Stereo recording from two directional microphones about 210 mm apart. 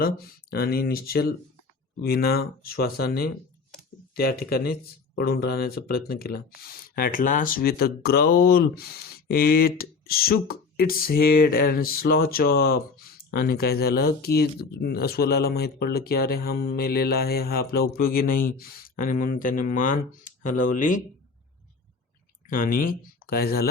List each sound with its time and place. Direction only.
0.0 s speech: 45° left (ahead or behind)
22.4 s speech: 40° left (ahead or behind)